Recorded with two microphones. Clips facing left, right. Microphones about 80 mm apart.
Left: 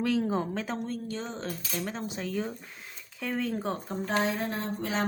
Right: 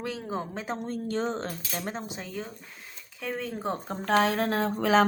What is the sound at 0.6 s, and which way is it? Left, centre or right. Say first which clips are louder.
Speech: even; right.